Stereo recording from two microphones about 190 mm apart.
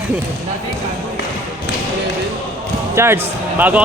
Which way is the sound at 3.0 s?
15° right (ahead or behind).